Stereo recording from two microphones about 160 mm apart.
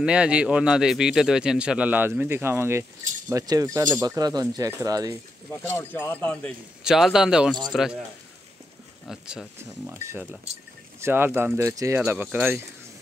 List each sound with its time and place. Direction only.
0.0 s speech: 5° right (ahead or behind); by 5.1 s 20° right (ahead or behind)
5.5 s speech: 15° left (ahead or behind)
6.8 s a man's voice: 5° right (ahead or behind)
9.0 s speech: 5° right (ahead or behind)
9.6 s speech: 15° right (ahead or behind)